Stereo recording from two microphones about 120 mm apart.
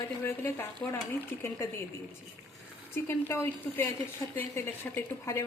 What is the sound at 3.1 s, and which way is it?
Speech, 20° left (ahead or behind).